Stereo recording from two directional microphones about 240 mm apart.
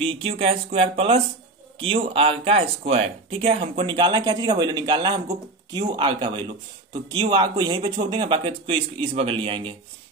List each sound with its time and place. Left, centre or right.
0.0 s speech: right